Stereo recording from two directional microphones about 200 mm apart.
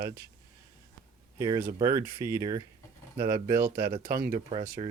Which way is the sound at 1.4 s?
20° right (ahead or behind).